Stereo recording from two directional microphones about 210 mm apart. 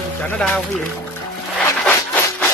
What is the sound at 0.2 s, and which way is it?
Speech, 5° left (ahead or behind).